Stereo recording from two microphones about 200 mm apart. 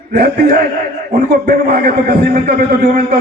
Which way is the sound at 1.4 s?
50° right (ahead or behind).